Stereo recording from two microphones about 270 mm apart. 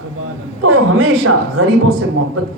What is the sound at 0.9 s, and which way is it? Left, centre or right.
Speech, right.